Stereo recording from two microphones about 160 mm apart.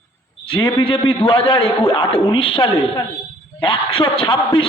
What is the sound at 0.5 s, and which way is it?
A man's voice, 35° left (ahead or behind).